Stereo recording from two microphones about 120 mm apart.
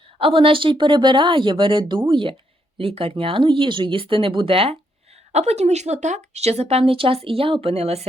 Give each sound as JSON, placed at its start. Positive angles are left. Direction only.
{"t": 0.2, "sound": "speech", "side_deg": -50}
{"t": 5.3, "sound": "speech", "side_deg": -65}